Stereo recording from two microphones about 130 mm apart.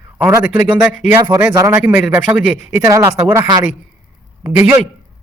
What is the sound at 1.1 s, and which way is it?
Speech, 30° right (ahead or behind).